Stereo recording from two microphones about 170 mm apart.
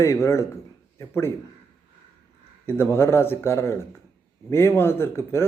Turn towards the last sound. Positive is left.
turn(degrees=15)  # may be behind; listen again after turning